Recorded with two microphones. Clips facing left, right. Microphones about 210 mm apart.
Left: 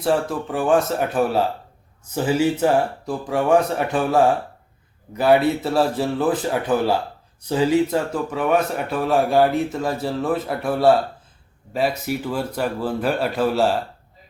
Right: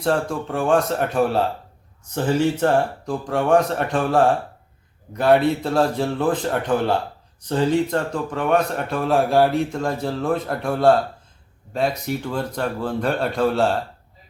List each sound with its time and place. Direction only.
0.0 s a man's voice: 5° left (ahead or behind)